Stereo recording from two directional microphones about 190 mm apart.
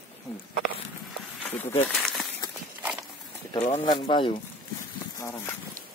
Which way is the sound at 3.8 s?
25° left (ahead or behind).